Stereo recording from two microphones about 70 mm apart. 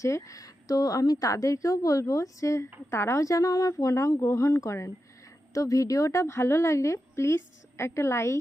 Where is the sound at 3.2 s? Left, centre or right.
Left.